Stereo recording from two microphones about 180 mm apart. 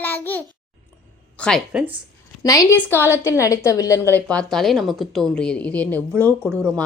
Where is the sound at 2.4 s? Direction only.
20° left (ahead or behind).